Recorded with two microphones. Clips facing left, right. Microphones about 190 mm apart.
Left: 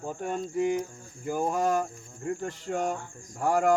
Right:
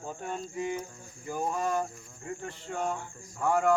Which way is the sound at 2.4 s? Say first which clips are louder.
Left 2 dB; 45° left (ahead or behind).